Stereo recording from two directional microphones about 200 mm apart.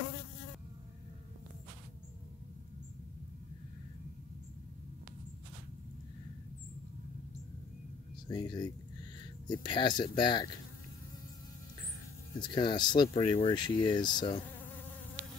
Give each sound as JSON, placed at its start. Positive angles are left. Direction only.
{"t": 8.3, "sound": "speech", "side_deg": 20}
{"t": 12.4, "sound": "speech", "side_deg": 25}